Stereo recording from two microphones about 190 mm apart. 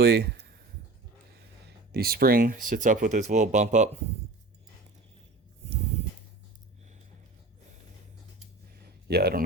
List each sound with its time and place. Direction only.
0.0 s speech: 55° right (ahead or behind)
1.9 s speech: 55° right (ahead or behind)
8.7 s a sound: 55° right (ahead or behind)